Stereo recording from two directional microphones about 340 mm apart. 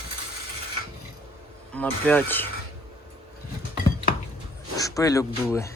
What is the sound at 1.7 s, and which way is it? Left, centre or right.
Speech, centre.